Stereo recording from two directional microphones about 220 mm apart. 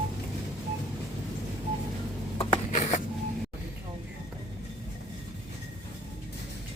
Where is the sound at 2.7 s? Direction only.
35° left (ahead or behind).